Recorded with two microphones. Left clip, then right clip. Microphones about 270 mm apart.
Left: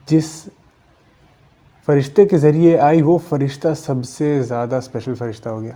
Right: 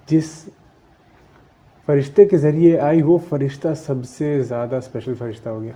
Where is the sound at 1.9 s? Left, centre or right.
Left.